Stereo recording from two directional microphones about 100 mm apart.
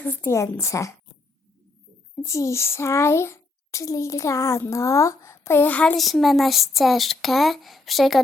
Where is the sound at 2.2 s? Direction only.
30° left (ahead or behind); by 5.9 s 15° left (ahead or behind).